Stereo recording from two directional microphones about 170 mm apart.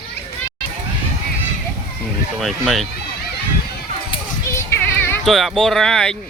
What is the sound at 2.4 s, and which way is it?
Speech, centre (ahead or behind).